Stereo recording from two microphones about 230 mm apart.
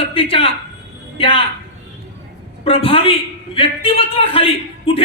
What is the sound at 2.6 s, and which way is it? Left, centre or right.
A man's voice, left.